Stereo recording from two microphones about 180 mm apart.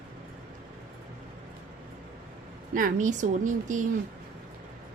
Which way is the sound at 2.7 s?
45° right (ahead or behind).